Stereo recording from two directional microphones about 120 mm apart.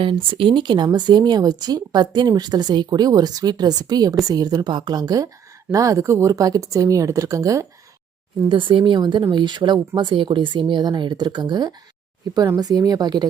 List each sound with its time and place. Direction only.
0.0 s speech: 45° right (ahead or behind); by 7.7 s 25° right (ahead or behind)
8.4 s speech: 45° right (ahead or behind)